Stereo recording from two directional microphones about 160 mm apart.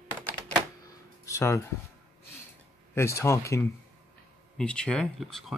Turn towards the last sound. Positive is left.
turn(degrees=0)  # may be behind; listen again after turning